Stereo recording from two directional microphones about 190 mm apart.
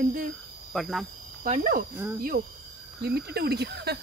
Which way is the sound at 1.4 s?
45° right (ahead or behind).